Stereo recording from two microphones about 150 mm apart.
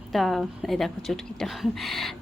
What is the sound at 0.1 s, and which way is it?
A woman's voice, centre (ahead or behind).